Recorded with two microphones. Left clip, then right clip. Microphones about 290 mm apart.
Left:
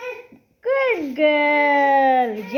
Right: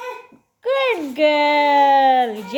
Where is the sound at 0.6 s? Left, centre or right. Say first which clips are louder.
Right 1 dB; right.